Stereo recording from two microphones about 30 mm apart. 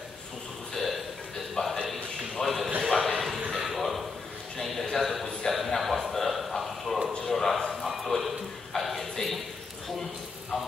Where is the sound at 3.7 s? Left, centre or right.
Centre.